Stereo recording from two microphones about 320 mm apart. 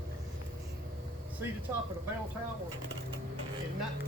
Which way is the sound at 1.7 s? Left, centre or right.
Centre.